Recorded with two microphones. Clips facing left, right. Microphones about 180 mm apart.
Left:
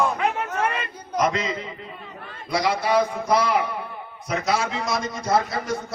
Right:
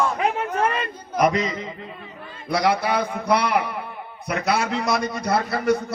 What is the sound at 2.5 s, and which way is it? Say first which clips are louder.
A man's voice: right 1 dB; 60° right (ahead or behind).